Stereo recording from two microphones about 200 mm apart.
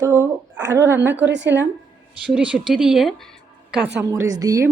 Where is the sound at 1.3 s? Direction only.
65° right (ahead or behind).